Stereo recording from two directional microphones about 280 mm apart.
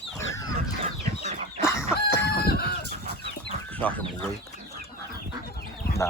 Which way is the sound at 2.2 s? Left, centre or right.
Left.